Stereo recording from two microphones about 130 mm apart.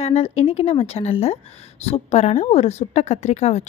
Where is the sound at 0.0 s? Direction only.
50° left (ahead or behind).